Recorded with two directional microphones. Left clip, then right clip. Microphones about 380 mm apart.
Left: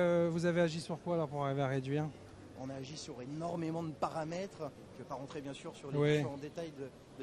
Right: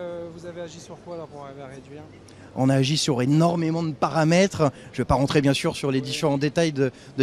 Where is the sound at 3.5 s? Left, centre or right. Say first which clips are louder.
Right 13 dB; centre; by 6.9 s right.